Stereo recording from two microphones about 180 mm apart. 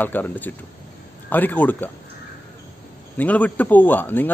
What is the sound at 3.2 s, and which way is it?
A man's voice, 10° left (ahead or behind).